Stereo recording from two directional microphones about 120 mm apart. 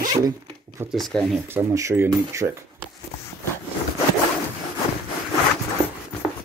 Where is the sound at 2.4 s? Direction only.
50° right (ahead or behind).